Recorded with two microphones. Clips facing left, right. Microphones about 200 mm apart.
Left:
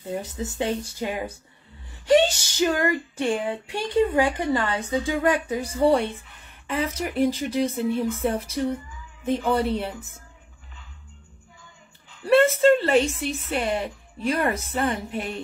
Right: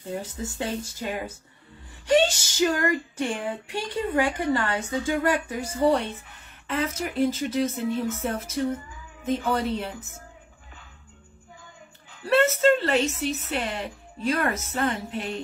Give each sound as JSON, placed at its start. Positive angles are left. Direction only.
{"t": 0.0, "sound": "a woman's voice", "side_deg": 15}
{"t": 12.3, "sound": "speech", "side_deg": 15}